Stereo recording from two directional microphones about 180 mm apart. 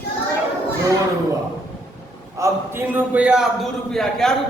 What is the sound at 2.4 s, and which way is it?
Speech, 10° right (ahead or behind).